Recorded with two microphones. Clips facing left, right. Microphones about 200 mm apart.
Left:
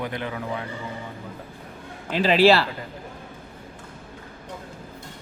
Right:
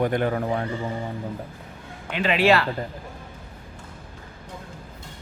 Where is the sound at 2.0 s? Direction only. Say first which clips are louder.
Left 3 dB; 35° left (ahead or behind).